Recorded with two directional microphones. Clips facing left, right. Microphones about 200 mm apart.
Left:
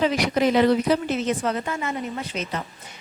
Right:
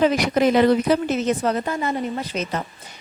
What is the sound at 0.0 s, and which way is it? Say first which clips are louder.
A woman's voice: right 3 dB; 50° right (ahead or behind).